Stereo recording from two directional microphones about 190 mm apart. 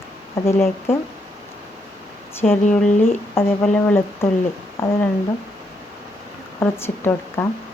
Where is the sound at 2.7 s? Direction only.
10° left (ahead or behind).